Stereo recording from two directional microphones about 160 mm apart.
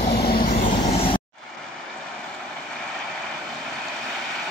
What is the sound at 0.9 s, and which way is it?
Vehicle, 35° left (ahead or behind).